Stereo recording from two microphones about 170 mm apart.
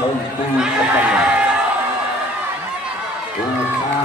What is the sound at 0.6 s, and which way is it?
Speech, 5° right (ahead or behind).